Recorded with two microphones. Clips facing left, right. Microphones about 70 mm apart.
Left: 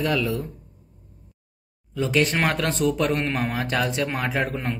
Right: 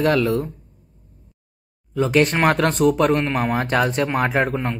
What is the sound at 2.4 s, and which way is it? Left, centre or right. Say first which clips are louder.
Speech: right 6 dB; right.